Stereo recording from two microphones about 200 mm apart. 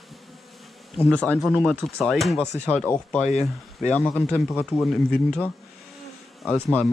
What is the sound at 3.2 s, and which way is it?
Speech, 35° left (ahead or behind).